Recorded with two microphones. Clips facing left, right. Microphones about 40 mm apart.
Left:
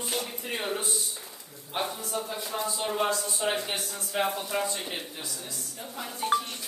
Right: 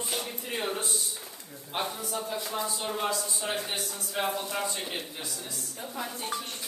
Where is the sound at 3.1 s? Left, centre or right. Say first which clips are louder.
Left 3 dB; left.